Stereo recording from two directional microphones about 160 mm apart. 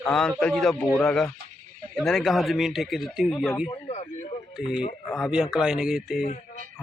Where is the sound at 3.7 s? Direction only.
40° left (ahead or behind).